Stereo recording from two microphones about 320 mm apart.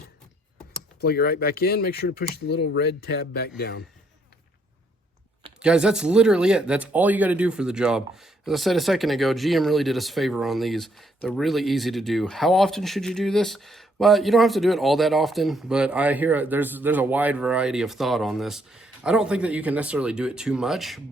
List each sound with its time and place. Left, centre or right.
1.0 s speech: left
5.5 s speech: centre